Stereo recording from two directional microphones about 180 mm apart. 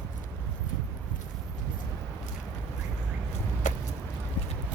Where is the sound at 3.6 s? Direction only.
45° left (ahead or behind).